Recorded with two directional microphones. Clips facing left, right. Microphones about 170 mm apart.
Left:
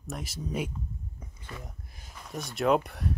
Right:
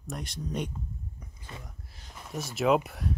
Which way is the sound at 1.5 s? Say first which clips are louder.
Left 3 dB; 25° right (ahead or behind).